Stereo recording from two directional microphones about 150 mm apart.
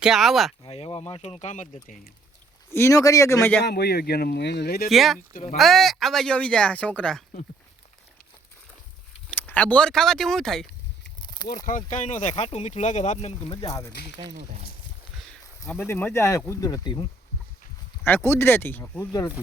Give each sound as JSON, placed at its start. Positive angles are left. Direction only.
{"t": 0.0, "sound": "speech", "side_deg": 0}
{"t": 0.6, "sound": "speech", "side_deg": 40}
{"t": 1.7, "sound": "speech", "side_deg": 60}
{"t": 2.7, "sound": "speech", "side_deg": 20}
{"t": 3.6, "sound": "speech", "side_deg": 90}
{"t": 4.9, "sound": "speech", "side_deg": 0}
{"t": 9.3, "sound": "speech", "side_deg": 10}
{"t": 11.9, "sound": "speech", "side_deg": 55}
{"t": 13.7, "sound": "speech", "side_deg": 25}
{"t": 15.3, "sound": "a sound", "side_deg": 5}
{"t": 15.8, "sound": "speech", "side_deg": 15}
{"t": 18.0, "sound": "speech", "side_deg": 15}